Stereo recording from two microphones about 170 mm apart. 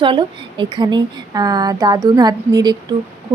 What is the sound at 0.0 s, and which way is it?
Speech, 30° right (ahead or behind).